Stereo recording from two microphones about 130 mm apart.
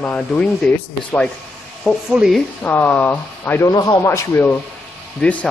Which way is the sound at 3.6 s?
30° left (ahead or behind).